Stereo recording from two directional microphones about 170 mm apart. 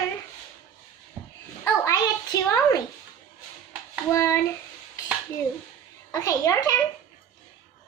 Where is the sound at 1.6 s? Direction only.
20° left (ahead or behind).